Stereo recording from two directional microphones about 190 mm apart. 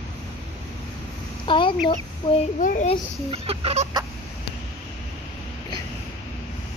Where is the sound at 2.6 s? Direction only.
40° left (ahead or behind).